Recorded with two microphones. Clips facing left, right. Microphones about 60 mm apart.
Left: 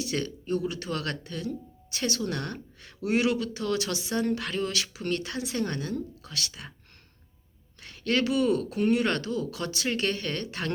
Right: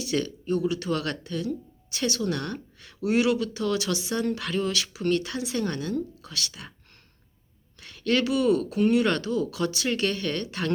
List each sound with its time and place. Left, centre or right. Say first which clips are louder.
0.0 s speech: right 3 dB; left
7.8 s speech: right 2 dB; left